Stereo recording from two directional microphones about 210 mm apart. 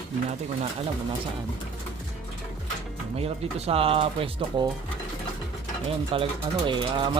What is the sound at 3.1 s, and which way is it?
Speech, 30° right (ahead or behind).